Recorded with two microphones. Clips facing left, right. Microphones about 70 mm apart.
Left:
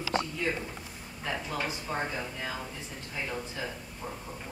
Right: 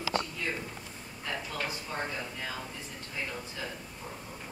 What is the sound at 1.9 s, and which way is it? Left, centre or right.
Speech, centre.